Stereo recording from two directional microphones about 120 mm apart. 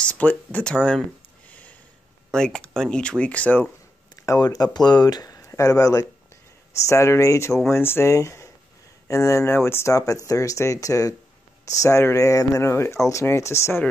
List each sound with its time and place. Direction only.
0.0 s speech: 10° left (ahead or behind)
1.5 s a sound: 10° left (ahead or behind)
2.3 s speech: 5° left (ahead or behind)
4.1 s speech: 30° left (ahead or behind)